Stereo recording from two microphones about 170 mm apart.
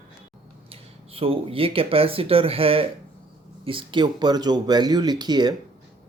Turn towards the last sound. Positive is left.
turn(degrees=-25)  # may be behind; listen again after turning